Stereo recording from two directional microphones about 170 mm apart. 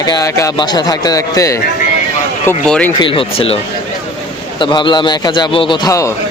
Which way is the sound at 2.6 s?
5° left (ahead or behind).